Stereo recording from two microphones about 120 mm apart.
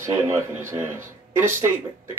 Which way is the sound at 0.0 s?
25° right (ahead or behind).